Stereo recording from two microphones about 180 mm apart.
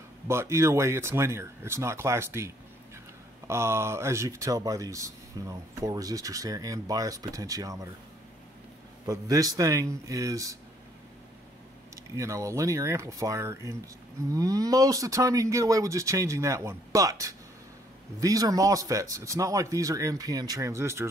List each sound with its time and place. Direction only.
0.3 s speech: 15° right (ahead or behind)
9.0 s speech: 20° right (ahead or behind)
11.9 s speech: 15° right (ahead or behind)